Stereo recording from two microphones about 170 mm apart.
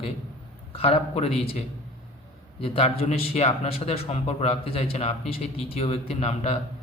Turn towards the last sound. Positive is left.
turn(degrees=40)  # may be behind; listen again after turning